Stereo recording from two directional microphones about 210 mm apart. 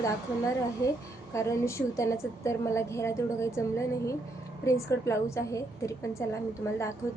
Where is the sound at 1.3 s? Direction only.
15° left (ahead or behind).